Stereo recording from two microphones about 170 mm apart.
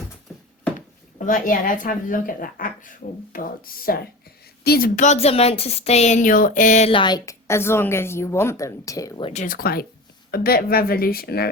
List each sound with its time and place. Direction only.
1.2 s speech: 50° left (ahead or behind)
4.9 s speech: 40° left (ahead or behind)
6.9 s a woman's voice: 25° left (ahead or behind)
9.2 s speech: 45° left (ahead or behind); by 11.5 s 65° left (ahead or behind)